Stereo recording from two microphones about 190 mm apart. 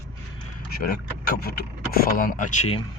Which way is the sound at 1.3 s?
55° left (ahead or behind).